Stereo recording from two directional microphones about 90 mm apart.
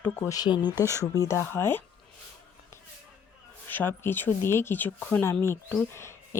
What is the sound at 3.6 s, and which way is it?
Speech, 25° left (ahead or behind).